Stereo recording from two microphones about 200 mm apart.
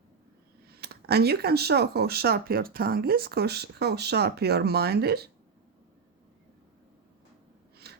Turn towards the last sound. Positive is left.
turn(degrees=-50)  # may be behind; listen again after turning